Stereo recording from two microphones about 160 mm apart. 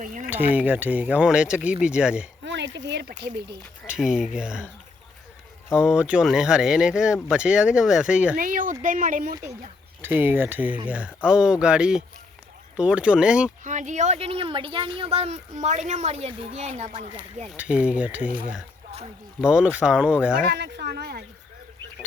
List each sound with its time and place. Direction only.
0.0 s speech: 55° right (ahead or behind)
0.3 s speech: 10° right (ahead or behind)
2.4 s a sound: 90° right
3.8 s speech: 5° right (ahead or behind)
5.7 s speech: 5° right (ahead or behind)
8.4 s speech: 60° right (ahead or behind)
10.0 s speech: 10° right (ahead or behind)
13.7 s speech: 50° right (ahead or behind)
17.6 s speech: 5° right (ahead or behind)
19.4 s speech: 5° right (ahead or behind)
20.5 s speech: 90° right